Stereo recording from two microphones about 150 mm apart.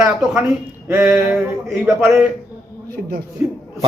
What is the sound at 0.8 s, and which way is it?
Speech, 15° right (ahead or behind).